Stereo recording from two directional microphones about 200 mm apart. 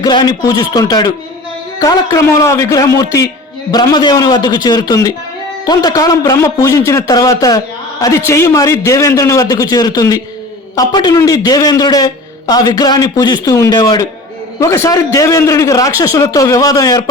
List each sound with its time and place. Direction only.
0.0 s a man's voice: 20° left (ahead or behind)